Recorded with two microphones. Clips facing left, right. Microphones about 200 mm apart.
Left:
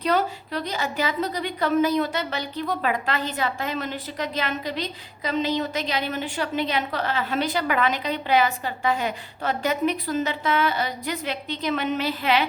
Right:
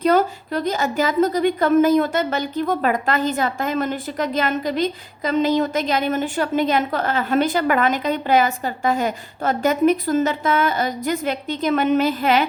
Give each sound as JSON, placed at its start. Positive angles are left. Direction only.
{"t": 0.0, "sound": "a woman's voice", "side_deg": -45}